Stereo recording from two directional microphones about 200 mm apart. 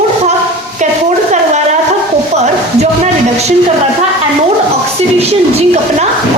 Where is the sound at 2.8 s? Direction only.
30° right (ahead or behind).